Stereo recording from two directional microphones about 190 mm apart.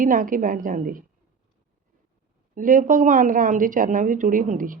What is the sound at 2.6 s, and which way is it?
A woman's voice, 45° right (ahead or behind).